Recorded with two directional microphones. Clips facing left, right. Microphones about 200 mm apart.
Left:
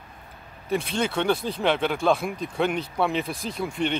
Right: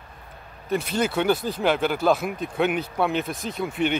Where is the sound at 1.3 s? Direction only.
25° left (ahead or behind).